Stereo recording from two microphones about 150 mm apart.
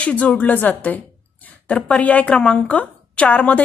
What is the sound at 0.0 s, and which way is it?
A woman's voice, 10° left (ahead or behind).